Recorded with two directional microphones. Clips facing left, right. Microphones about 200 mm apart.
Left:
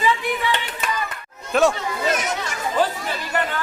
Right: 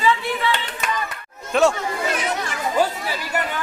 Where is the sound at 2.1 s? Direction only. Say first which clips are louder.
Left 1 dB; 45° left (ahead or behind).